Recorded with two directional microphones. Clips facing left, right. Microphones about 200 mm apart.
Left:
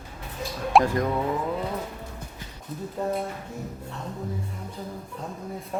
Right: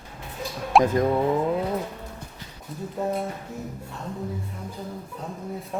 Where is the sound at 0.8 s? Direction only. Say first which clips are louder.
Right 4 dB; 25° right (ahead or behind).